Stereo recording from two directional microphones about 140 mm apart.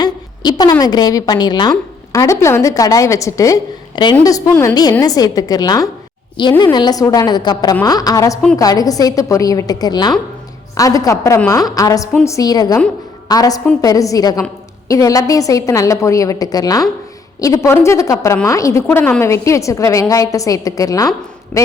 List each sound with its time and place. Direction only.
0.0 s a woman's voice: 30° left (ahead or behind)
21.5 s a man's voice: 15° left (ahead or behind)